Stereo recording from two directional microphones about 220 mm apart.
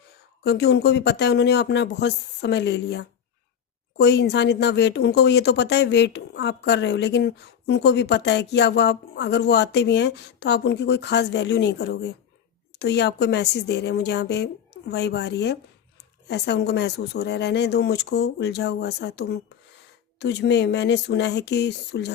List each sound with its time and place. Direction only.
0.4 s speech: 50° left (ahead or behind)